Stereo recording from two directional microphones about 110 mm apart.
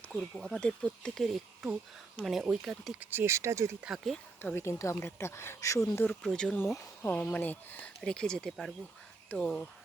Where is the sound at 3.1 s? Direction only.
25° right (ahead or behind).